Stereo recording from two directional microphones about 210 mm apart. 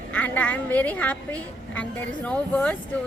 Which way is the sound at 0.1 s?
5° left (ahead or behind).